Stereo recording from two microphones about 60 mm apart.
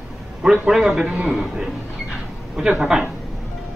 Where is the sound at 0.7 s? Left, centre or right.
Centre.